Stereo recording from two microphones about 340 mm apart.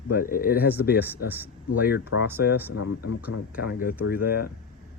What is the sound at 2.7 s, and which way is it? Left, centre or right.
Speech, left.